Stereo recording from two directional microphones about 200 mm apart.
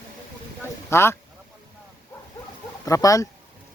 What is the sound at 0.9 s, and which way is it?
Speech, 15° left (ahead or behind).